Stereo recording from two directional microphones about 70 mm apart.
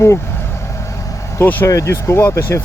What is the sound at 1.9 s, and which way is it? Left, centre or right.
Speech, left.